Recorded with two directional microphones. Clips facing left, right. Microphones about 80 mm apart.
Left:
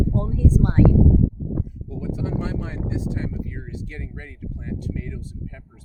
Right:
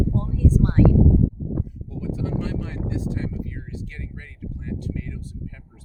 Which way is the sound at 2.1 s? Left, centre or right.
Left.